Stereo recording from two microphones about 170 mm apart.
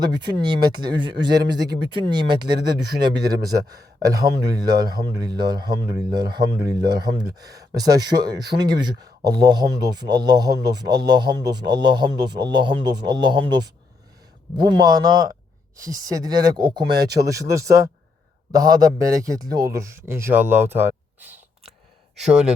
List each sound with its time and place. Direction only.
0.0 s a man's voice: 25° right (ahead or behind); by 22.5 s 5° right (ahead or behind)